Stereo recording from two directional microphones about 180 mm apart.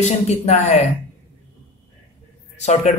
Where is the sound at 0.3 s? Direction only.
35° left (ahead or behind).